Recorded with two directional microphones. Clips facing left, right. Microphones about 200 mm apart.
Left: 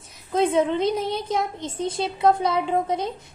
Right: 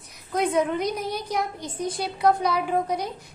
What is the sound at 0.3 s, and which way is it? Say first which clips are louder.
Speech: left 3 dB; 25° left (ahead or behind).